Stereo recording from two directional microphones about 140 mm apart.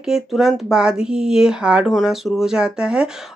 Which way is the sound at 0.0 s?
5° right (ahead or behind).